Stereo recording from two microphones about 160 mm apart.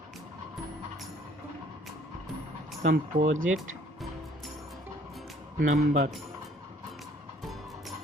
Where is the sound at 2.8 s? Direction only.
50° right (ahead or behind).